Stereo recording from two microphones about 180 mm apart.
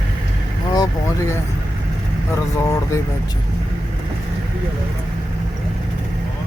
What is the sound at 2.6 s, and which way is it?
Speech, 15° left (ahead or behind).